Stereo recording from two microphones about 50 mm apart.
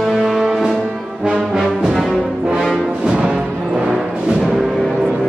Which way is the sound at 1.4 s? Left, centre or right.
Centre.